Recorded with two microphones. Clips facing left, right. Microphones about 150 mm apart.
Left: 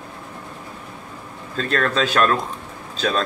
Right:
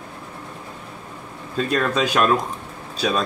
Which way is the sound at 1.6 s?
10° right (ahead or behind).